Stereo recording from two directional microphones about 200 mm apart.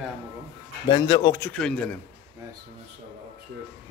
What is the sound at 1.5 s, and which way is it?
Speech, 5° left (ahead or behind).